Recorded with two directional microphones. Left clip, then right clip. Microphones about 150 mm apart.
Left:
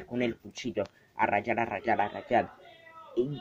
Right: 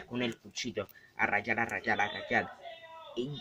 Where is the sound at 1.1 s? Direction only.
20° left (ahead or behind).